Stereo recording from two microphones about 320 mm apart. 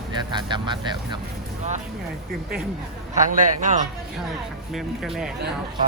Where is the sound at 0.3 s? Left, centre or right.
Centre.